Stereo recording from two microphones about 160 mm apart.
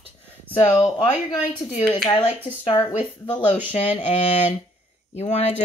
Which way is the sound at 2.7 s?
20° left (ahead or behind).